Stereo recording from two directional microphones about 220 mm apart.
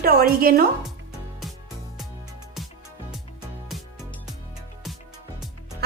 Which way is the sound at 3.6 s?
Centre (ahead or behind).